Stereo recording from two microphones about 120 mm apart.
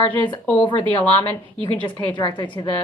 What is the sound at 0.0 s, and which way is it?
Speech, 15° left (ahead or behind).